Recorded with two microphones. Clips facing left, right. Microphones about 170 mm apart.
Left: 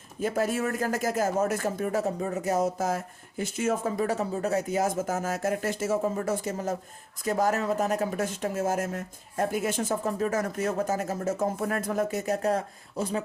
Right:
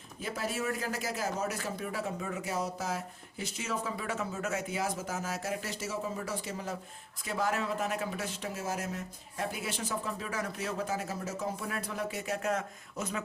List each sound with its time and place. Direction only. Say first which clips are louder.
0.2 s speech: left 8 dB; 50° left (ahead or behind); by 13.2 s 35° left (ahead or behind)